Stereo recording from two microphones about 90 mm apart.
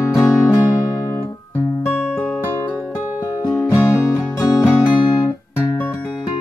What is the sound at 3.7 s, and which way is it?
Music, 35° left (ahead or behind).